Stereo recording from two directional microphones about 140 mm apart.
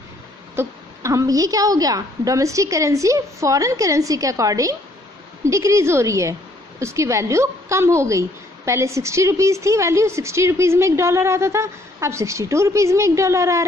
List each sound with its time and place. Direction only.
0.6 s a woman's voice: 20° right (ahead or behind)